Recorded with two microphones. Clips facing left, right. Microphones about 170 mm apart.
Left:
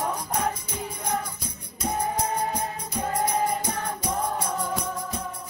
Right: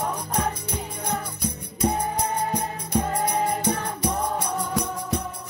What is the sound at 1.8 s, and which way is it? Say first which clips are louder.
Music: right 5 dB; 60° right (ahead or behind).